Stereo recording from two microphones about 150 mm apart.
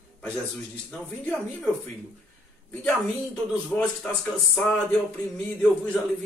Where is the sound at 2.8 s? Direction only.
5° left (ahead or behind).